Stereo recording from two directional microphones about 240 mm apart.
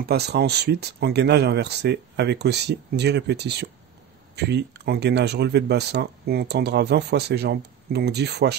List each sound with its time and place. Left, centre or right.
0.0 s speech: right